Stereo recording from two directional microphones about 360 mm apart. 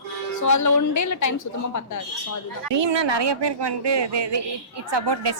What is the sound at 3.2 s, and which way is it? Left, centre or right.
Speech, right.